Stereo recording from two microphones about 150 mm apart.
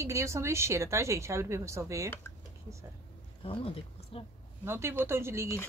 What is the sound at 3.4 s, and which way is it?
Speech, 40° left (ahead or behind).